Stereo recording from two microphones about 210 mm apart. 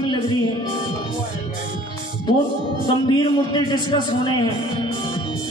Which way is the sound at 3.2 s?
20° left (ahead or behind).